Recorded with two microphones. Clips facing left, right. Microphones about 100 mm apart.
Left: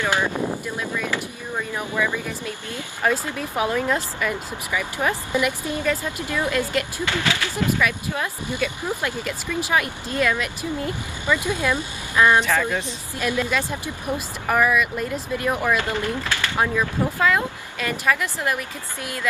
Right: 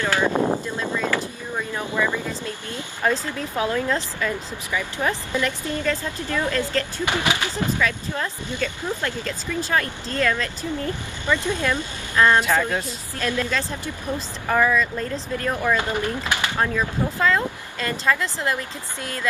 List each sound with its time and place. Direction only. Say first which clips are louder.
0.0 s a sound: right 1 dB; 15° left (ahead or behind)
0.3 s a sound: right 5 dB; 55° right (ahead or behind)
0.8 s a sound: right 4 dB; 20° right (ahead or behind)
1.1 s vehicle: right 1 dB; 10° left (ahead or behind)
3.0 s speech: even; 15° left (ahead or behind)
7.1 s speech: right 1 dB; 20° right (ahead or behind)
7.8 s speech: left 1 dB; 15° left (ahead or behind)
15.7 s speech: even; 20° right (ahead or behind)
16.5 s speech: left 4 dB; 15° left (ahead or behind)